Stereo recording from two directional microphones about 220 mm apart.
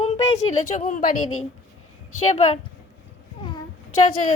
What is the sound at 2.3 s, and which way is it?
Speech, 30° left (ahead or behind).